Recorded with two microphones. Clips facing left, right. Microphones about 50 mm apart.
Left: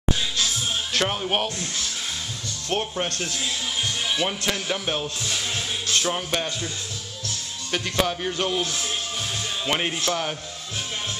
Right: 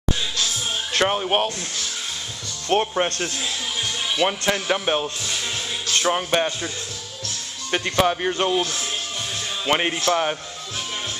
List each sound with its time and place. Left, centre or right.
0.9 s speech: centre
2.7 s a man's voice: right
7.7 s a man's voice: right
9.7 s a man's voice: right